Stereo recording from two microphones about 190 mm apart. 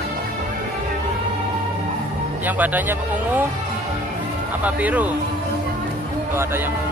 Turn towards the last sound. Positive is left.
turn(degrees=-10)  # may be behind; listen again after turning